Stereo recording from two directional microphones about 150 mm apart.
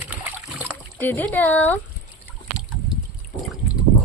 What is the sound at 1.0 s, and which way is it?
Speech, 15° left (ahead or behind).